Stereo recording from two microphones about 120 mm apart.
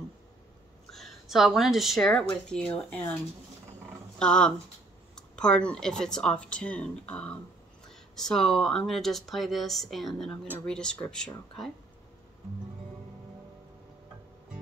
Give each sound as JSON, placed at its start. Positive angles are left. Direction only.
{"t": 0.9, "sound": "speech", "side_deg": 0}
{"t": 4.2, "sound": "speech", "side_deg": 5}
{"t": 5.1, "sound": "a sound", "side_deg": 5}
{"t": 5.7, "sound": "speech", "side_deg": 5}